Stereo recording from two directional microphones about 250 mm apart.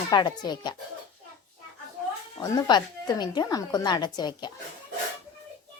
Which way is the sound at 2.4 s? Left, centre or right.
Centre.